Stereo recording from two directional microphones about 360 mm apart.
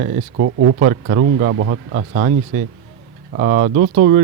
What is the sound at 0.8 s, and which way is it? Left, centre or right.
Speech, right.